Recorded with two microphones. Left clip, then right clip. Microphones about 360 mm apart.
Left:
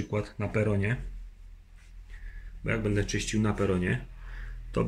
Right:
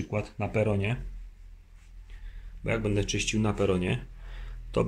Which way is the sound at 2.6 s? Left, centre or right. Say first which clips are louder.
Right 1 dB; centre.